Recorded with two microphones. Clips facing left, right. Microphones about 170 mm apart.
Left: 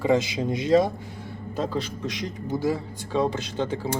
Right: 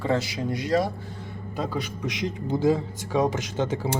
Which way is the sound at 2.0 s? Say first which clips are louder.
Right 2 dB; 20° right (ahead or behind).